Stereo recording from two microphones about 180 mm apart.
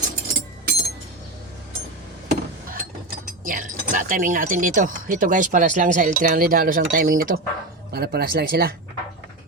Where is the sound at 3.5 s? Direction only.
45° right (ahead or behind).